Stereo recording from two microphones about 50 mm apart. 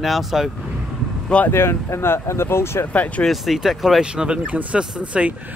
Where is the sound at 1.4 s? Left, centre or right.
Left.